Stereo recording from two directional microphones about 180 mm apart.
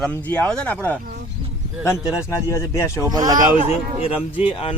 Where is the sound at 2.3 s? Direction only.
15° left (ahead or behind).